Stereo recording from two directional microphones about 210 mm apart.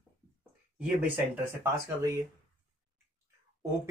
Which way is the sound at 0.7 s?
5° right (ahead or behind).